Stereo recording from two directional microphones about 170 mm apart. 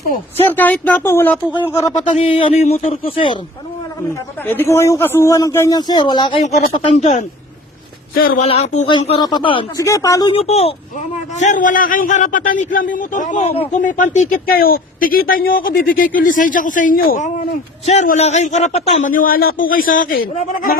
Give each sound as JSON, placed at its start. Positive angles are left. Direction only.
{"t": 0.4, "sound": "speech", "side_deg": 10}
{"t": 2.0, "sound": "speech", "side_deg": 35}
{"t": 4.4, "sound": "speech", "side_deg": 15}
{"t": 6.4, "sound": "speech", "side_deg": 40}
{"t": 8.1, "sound": "speech", "side_deg": 60}
{"t": 8.4, "sound": "a man's voice", "side_deg": 40}
{"t": 8.9, "sound": "speech", "side_deg": 30}
{"t": 9.8, "sound": "speech", "side_deg": 20}
{"t": 10.3, "sound": "a man's voice", "side_deg": 35}
{"t": 14.4, "sound": "a man's voice", "side_deg": 60}
{"t": 20.3, "sound": "speech", "side_deg": 40}